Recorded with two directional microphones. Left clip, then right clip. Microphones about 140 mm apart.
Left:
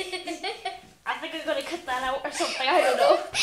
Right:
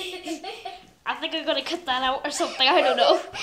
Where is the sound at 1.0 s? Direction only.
40° right (ahead or behind).